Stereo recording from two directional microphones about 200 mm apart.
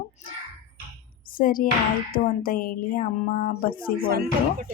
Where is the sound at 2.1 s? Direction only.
45° left (ahead or behind).